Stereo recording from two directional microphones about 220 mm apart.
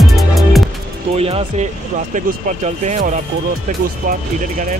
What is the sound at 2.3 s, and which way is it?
Speech, 35° right (ahead or behind).